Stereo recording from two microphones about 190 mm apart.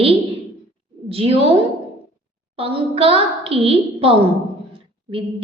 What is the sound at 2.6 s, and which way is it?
A woman's voice, 30° right (ahead or behind).